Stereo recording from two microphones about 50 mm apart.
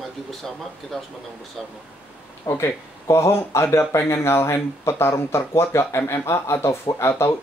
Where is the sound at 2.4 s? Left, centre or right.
Left.